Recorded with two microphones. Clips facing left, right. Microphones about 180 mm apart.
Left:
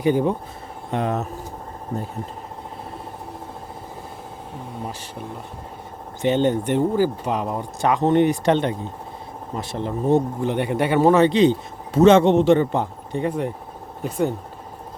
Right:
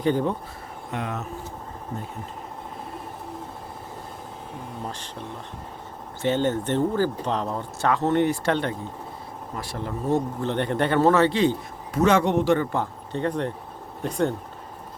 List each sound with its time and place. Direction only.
0.0 s speech: 10° left (ahead or behind)
0.9 s speech: 35° left (ahead or behind)
6.2 s speech: 15° left (ahead or behind)